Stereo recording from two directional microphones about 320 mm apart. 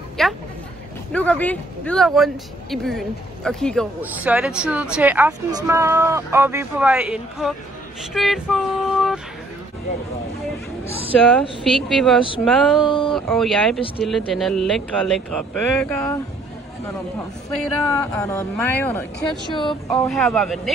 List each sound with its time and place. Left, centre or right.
0.2 s speech: centre
10.9 s speech: centre
11.9 s speech: centre
12.8 s speech: centre
13.1 s speech: centre
17.9 s speech: centre
19.5 s speech: centre
20.1 s speech: centre